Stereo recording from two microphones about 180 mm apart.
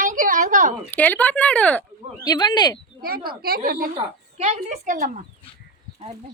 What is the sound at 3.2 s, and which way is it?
Speech, 55° right (ahead or behind).